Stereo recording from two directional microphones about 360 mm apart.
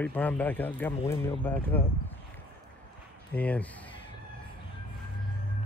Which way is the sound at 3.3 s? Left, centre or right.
Centre.